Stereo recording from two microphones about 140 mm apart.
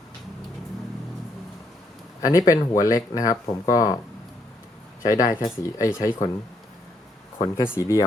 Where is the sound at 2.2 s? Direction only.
25° left (ahead or behind).